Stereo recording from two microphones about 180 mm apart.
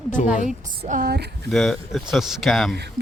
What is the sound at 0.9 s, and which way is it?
Speech, 55° right (ahead or behind).